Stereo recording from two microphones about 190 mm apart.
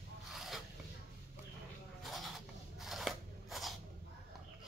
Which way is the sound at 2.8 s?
Centre (ahead or behind).